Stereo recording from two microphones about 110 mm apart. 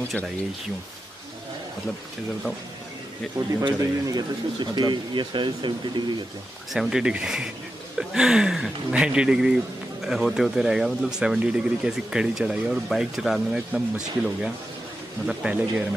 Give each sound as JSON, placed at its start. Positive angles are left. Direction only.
{"t": 3.6, "sound": "speech", "side_deg": -40}
{"t": 6.7, "sound": "speech", "side_deg": -5}